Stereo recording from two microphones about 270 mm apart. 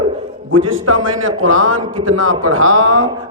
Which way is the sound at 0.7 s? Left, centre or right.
Right.